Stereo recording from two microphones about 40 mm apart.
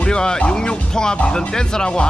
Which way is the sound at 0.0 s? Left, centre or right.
Left.